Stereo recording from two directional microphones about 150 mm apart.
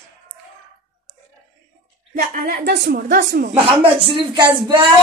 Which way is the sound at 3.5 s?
40° right (ahead or behind).